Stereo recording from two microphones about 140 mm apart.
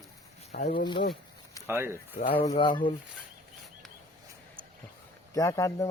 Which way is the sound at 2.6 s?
35° left (ahead or behind).